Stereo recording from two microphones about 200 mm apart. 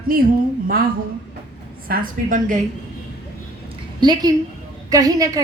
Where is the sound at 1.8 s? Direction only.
45° right (ahead or behind).